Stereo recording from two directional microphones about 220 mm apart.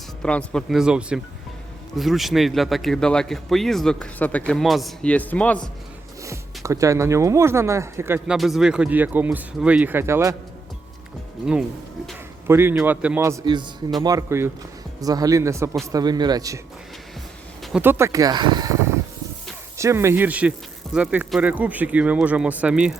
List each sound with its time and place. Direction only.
0.2 s speech: 5° left (ahead or behind)
6.2 s speech: 15° right (ahead or behind)
12.5 s speech: 10° right (ahead or behind)
17.6 s speech: centre (ahead or behind)